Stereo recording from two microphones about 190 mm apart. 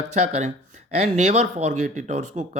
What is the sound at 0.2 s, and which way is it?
Speech, 40° right (ahead or behind).